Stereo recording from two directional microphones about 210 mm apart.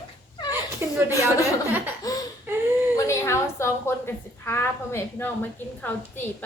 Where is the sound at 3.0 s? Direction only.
15° left (ahead or behind).